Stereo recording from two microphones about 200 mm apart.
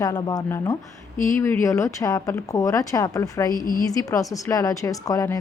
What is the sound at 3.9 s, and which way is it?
Speech, 15° left (ahead or behind).